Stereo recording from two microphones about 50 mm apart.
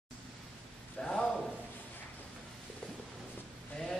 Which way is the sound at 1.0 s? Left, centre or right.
Centre.